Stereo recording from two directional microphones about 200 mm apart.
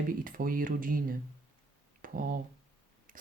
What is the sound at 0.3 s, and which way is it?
Speech, 45° right (ahead or behind).